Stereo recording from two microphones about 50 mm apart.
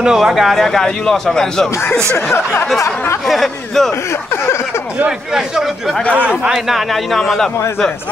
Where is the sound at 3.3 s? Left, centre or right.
Centre.